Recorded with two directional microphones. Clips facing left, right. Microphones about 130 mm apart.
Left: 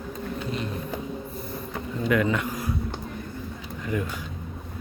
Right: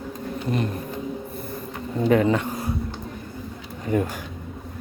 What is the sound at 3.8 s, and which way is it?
Speech, 45° right (ahead or behind).